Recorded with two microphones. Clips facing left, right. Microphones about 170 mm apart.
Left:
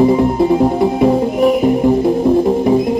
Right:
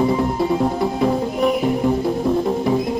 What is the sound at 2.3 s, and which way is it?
Music, 25° left (ahead or behind).